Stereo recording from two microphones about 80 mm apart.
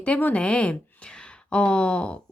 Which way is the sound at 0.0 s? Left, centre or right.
Centre.